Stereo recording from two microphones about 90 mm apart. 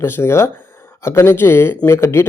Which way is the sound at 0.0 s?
30° left (ahead or behind).